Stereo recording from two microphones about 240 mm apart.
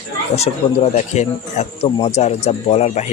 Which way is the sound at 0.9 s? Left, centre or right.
Left.